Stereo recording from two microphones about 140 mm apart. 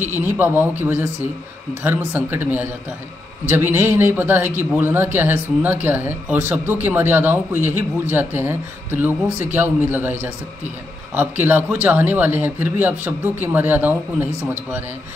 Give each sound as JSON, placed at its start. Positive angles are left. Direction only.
{"t": 0.0, "sound": "speech", "side_deg": -15}
{"t": 11.1, "sound": "speech", "side_deg": -15}